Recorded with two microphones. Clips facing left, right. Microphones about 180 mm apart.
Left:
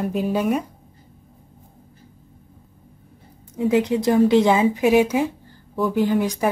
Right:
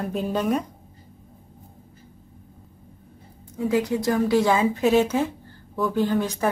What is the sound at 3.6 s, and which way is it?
A woman's voice, 20° left (ahead or behind).